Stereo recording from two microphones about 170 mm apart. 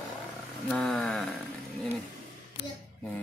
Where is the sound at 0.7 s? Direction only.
5° left (ahead or behind).